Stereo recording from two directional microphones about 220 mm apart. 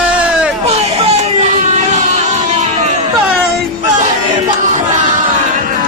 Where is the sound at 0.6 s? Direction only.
30° right (ahead or behind).